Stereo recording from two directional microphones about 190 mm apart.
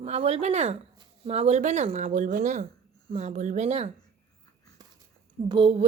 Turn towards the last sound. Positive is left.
turn(degrees=-25)  # may be behind; listen again after turning